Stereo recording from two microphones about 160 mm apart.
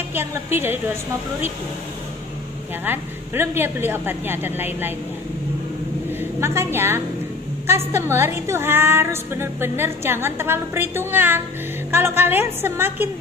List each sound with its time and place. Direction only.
0.1 s music: 15° right (ahead or behind)
2.8 s music: 15° right (ahead or behind)
6.4 s music: 15° right (ahead or behind)